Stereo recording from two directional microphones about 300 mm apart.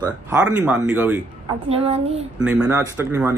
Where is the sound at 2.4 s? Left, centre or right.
Centre.